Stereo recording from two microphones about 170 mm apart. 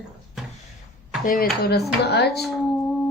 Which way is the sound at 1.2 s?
60° left (ahead or behind).